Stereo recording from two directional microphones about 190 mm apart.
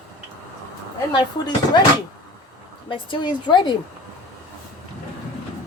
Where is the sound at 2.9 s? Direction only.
25° left (ahead or behind).